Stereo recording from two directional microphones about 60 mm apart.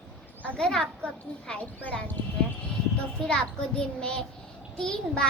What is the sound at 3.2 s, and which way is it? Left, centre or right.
A child's voice, centre.